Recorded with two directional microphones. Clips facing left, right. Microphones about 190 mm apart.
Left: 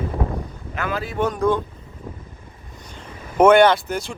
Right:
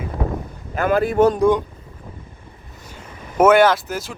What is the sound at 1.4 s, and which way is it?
Speech, 15° right (ahead or behind).